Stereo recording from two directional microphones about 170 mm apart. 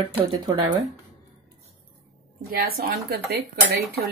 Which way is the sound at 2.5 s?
60° right (ahead or behind).